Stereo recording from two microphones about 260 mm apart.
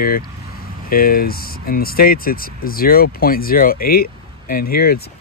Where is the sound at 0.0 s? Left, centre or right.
Left.